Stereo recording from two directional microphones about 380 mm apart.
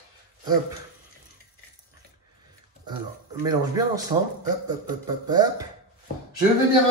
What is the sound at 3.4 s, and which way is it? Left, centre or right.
Speech, centre.